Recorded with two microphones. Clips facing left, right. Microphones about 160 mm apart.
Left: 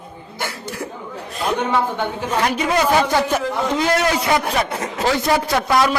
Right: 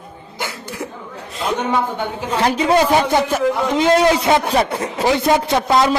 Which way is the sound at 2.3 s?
30° right (ahead or behind).